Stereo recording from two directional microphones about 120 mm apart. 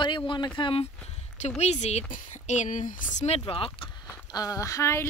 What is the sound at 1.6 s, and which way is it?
Speech, 65° left (ahead or behind).